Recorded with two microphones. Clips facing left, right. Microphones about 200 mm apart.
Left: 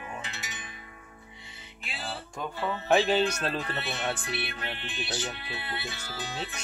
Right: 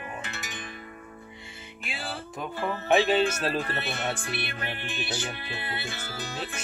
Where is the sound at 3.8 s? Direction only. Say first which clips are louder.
Right 1 dB; 50° right (ahead or behind).